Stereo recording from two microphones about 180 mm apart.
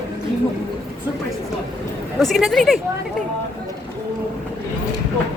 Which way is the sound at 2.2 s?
Centre (ahead or behind).